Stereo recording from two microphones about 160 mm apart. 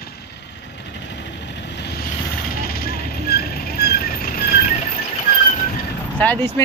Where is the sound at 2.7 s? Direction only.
75° left (ahead or behind).